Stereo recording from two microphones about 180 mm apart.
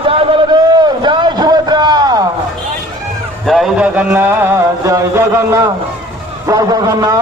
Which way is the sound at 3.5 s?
Centre (ahead or behind).